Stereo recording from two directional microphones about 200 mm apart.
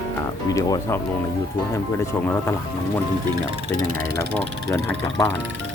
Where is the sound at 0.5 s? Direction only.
15° left (ahead or behind).